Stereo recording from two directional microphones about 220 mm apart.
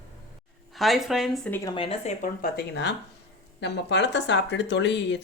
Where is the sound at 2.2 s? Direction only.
45° left (ahead or behind).